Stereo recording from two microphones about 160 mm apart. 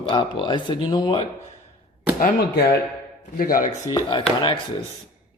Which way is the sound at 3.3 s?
60° left (ahead or behind).